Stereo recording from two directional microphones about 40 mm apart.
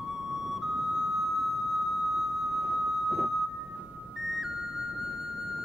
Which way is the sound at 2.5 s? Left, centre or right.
Right.